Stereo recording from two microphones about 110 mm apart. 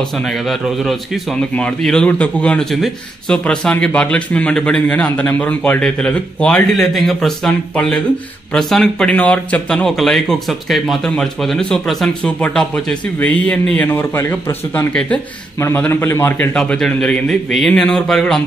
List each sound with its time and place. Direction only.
0.5 s a man's voice: centre (ahead or behind)
15.6 s a man's voice: 20° left (ahead or behind)
16.5 s a man's voice: 10° left (ahead or behind)